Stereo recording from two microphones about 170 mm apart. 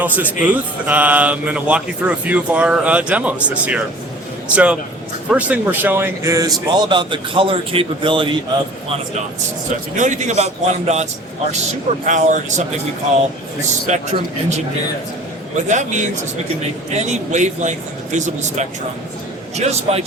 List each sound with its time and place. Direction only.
0.0 s a man's voice: 10° right (ahead or behind); by 8.4 s 30° right (ahead or behind)
9.9 s speech: 45° right (ahead or behind)
13.7 s a man's voice: 45° right (ahead or behind)